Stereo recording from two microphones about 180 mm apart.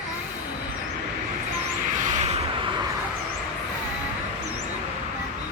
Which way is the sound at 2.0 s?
40° right (ahead or behind).